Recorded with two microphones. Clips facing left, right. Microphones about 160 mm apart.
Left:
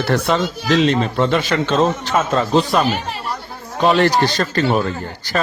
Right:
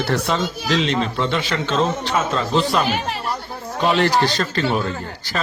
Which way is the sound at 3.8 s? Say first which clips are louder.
Left 3 dB; 40° left (ahead or behind).